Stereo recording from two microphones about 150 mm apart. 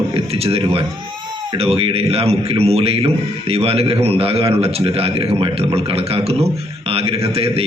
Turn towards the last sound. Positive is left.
turn(degrees=-40)  # may be behind; listen again after turning